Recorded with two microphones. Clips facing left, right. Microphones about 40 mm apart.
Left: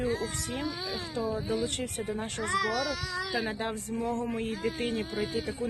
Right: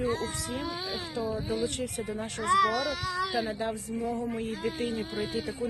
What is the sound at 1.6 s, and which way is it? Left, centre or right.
Speech, left.